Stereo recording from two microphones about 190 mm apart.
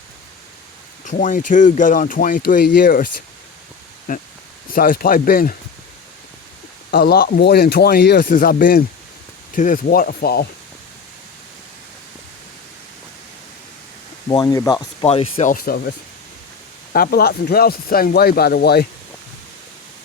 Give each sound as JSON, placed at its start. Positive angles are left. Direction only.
{"t": 1.0, "sound": "speech", "side_deg": 40}
{"t": 4.1, "sound": "speech", "side_deg": 45}
{"t": 6.9, "sound": "speech", "side_deg": 55}
{"t": 14.3, "sound": "speech", "side_deg": 20}
{"t": 15.0, "sound": "speech", "side_deg": 30}
{"t": 15.4, "sound": "speech", "side_deg": 50}
{"t": 16.9, "sound": "speech", "side_deg": 50}